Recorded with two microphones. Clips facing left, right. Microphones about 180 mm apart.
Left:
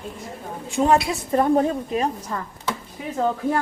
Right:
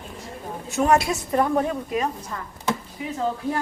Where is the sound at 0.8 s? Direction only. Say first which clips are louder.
Left 1 dB; 30° left (ahead or behind).